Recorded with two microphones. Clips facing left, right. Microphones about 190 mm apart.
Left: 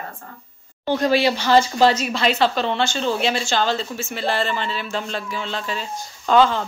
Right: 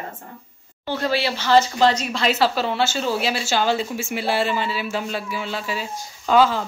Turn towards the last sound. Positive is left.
turn(degrees=-5)  # may be behind; listen again after turning